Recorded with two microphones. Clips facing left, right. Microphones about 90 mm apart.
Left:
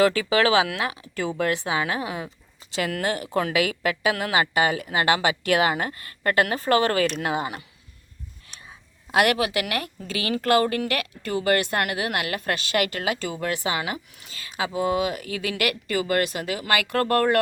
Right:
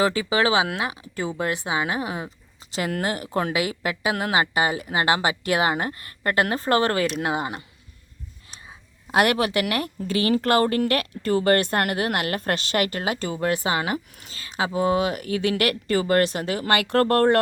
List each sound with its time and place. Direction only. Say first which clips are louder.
0.0 s speech: left 1 dB; 25° right (ahead or behind)
9.1 s speech: right 1 dB; 35° right (ahead or behind)